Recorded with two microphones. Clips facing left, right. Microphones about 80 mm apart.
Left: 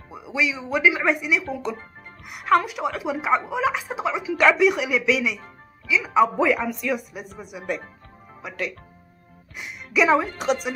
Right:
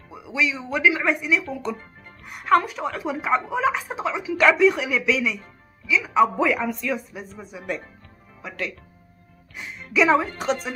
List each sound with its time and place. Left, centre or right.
0.1 s a woman's voice: left